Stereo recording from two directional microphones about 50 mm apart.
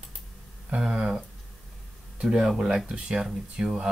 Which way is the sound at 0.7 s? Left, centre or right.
Centre.